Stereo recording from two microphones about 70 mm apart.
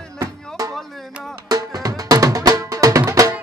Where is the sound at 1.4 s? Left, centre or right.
Right.